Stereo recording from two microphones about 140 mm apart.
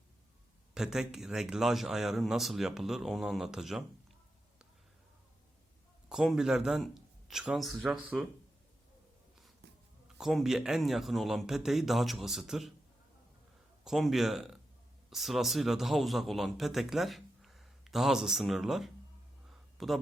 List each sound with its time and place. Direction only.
0.7 s a man's voice: 5° right (ahead or behind)
6.1 s speech: 5° right (ahead or behind)
10.2 s a man's voice: centre (ahead or behind)
13.8 s a man's voice: centre (ahead or behind)
19.5 s a sound: centre (ahead or behind)